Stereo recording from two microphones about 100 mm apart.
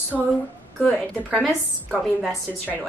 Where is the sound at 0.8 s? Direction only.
5° left (ahead or behind).